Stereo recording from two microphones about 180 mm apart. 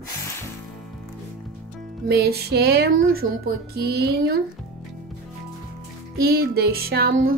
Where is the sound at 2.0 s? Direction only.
60° right (ahead or behind).